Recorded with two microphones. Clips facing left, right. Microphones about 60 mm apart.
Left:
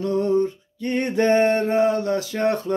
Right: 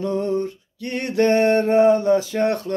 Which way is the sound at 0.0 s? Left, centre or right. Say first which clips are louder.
Left 2 dB; centre.